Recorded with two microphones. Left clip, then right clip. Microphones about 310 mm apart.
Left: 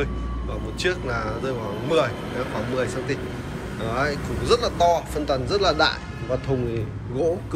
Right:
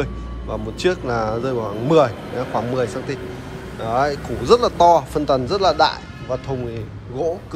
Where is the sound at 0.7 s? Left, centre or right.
Centre.